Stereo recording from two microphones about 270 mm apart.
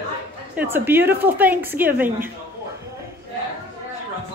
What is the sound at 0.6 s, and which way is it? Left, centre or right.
A woman's voice, centre.